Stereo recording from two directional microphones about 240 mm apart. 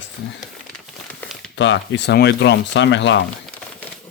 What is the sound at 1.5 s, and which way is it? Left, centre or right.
Speech, left.